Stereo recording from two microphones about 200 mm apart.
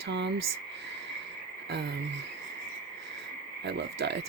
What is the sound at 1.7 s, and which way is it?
Speech, 60° right (ahead or behind).